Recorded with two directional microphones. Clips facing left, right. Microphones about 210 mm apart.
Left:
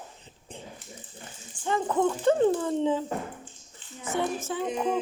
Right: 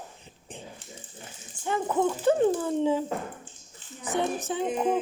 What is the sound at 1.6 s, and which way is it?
Speech, 10° right (ahead or behind).